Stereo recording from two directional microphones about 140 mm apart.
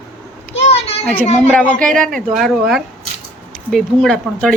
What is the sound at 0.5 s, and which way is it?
Children playing, 45° left (ahead or behind).